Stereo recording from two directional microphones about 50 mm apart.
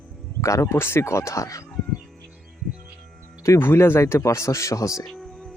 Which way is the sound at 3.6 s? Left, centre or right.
Left.